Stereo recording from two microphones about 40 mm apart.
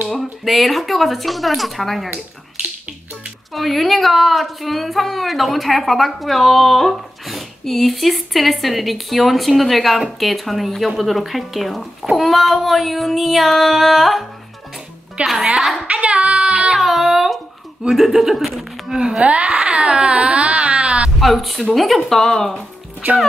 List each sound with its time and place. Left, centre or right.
0.1 s a woman's voice: centre
3.5 s a woman's voice: centre
15.2 s speech: right
15.9 s child singing: right
16.7 s a sound: centre
17.8 s speech: centre
19.2 s speech: right
21.2 s a woman's voice: centre